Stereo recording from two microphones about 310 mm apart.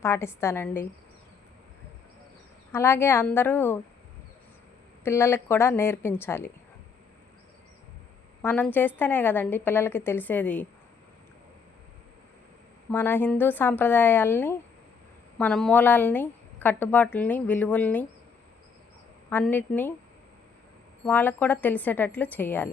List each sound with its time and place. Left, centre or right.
0.0 s a woman's voice: centre
2.7 s a woman's voice: centre
5.0 s a woman's voice: centre
8.4 s a woman's voice: centre
12.9 s a woman's voice: centre
19.3 s a woman's voice: centre
21.0 s a woman's voice: centre